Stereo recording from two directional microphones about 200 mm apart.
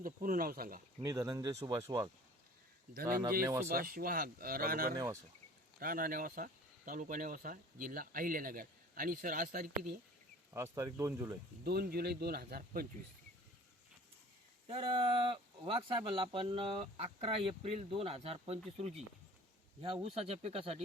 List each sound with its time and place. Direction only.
0.0 s speech: 45° right (ahead or behind)
1.0 s speech: 15° right (ahead or behind)
2.9 s speech: 45° right (ahead or behind)
10.5 s speech: 15° right (ahead or behind)
11.6 s speech: 50° right (ahead or behind)
14.7 s speech: 25° right (ahead or behind)